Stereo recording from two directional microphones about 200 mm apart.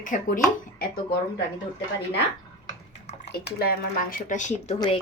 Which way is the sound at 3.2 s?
55° left (ahead or behind).